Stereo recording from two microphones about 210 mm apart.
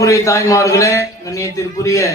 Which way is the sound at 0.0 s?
15° left (ahead or behind).